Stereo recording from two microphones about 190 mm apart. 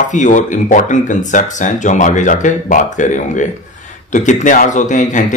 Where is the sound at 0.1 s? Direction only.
40° left (ahead or behind).